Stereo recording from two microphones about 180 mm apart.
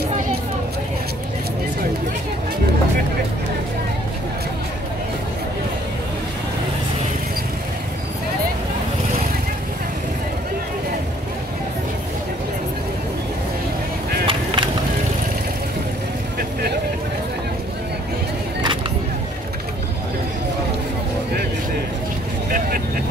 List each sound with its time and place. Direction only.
14.2 s skateboard: 25° right (ahead or behind)